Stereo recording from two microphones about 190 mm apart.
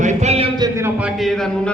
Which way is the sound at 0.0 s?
40° right (ahead or behind).